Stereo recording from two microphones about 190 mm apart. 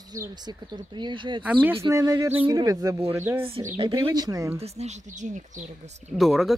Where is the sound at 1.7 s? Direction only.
20° right (ahead or behind).